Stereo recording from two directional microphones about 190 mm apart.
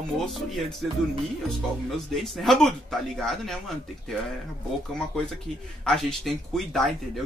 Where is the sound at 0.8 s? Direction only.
Centre (ahead or behind).